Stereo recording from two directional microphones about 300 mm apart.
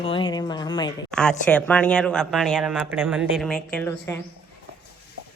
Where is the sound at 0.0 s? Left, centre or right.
Centre.